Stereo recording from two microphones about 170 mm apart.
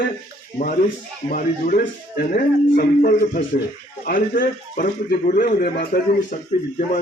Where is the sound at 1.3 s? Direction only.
55° left (ahead or behind).